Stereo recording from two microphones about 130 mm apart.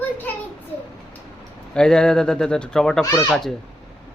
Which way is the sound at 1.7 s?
5° left (ahead or behind).